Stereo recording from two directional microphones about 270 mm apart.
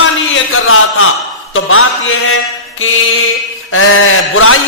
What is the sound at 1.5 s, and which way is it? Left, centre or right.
Speech, left.